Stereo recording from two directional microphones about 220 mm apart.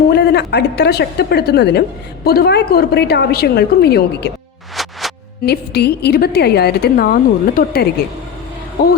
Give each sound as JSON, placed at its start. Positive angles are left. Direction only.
{"t": 0.1, "sound": "a woman's voice", "side_deg": 50}
{"t": 4.8, "sound": "music", "side_deg": 0}
{"t": 5.5, "sound": "a woman's voice", "side_deg": 45}